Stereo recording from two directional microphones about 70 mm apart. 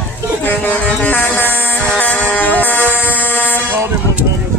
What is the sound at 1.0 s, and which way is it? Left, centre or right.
Music, left.